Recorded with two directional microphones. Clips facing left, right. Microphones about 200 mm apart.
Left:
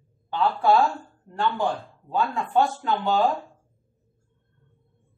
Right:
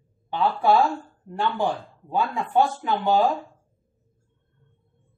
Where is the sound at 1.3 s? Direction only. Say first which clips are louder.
Even; 15° right (ahead or behind).